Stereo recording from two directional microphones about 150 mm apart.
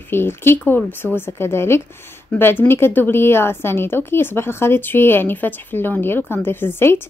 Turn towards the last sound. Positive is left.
turn(degrees=15)  # may be behind; listen again after turning